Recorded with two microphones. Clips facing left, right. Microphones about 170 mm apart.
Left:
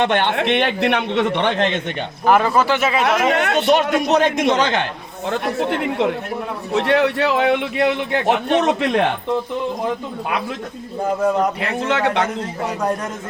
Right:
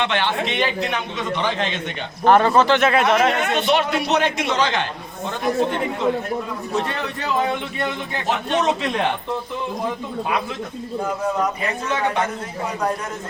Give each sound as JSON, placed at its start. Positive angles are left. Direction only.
{"t": 0.0, "sound": "a man's voice", "side_deg": 50}
{"t": 2.2, "sound": "speech", "side_deg": 5}
{"t": 3.7, "sound": "a man's voice", "side_deg": 45}
{"t": 5.3, "sound": "a man's voice", "side_deg": 70}
{"t": 11.6, "sound": "speech", "side_deg": 75}